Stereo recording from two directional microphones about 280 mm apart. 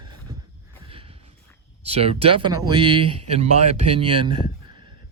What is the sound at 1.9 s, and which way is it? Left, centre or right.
Speech, right.